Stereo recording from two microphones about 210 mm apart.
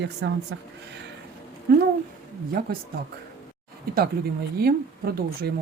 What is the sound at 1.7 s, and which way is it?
Speech, 45° right (ahead or behind).